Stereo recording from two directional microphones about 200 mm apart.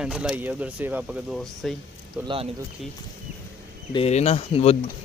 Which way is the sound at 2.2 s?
25° right (ahead or behind).